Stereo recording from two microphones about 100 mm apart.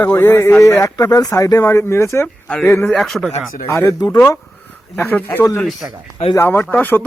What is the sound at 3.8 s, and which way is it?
Speech, 35° left (ahead or behind).